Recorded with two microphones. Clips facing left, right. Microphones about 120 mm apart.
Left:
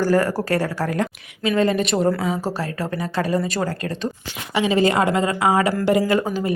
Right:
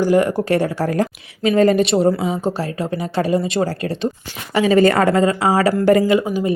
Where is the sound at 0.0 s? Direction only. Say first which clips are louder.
Right 3 dB; 20° right (ahead or behind); by 1.8 s 40° right (ahead or behind).